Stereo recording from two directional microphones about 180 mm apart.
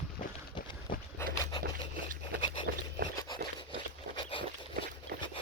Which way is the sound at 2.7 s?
60° right (ahead or behind).